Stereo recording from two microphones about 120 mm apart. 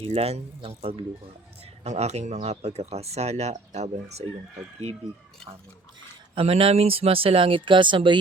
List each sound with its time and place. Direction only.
0.0 s speech: 55° right (ahead or behind)
1.8 s speech: 65° right (ahead or behind)
6.3 s speech: 55° right (ahead or behind)